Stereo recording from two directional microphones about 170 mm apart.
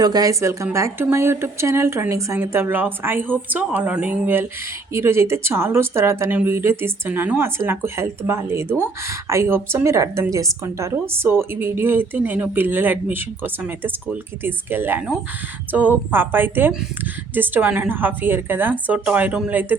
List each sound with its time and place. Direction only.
0.0 s speech: 20° right (ahead or behind)